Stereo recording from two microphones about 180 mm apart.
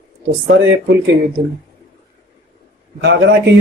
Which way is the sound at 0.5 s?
90° right.